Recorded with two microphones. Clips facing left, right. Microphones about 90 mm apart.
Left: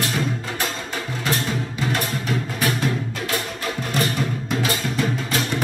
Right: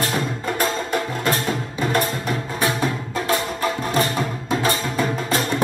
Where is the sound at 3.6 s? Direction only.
35° right (ahead or behind).